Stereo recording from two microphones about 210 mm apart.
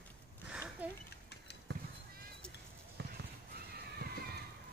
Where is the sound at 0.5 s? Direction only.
5° right (ahead or behind).